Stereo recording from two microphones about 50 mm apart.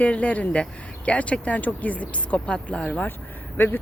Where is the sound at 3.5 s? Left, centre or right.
Left.